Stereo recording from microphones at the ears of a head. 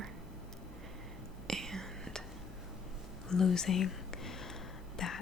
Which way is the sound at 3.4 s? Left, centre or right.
Left.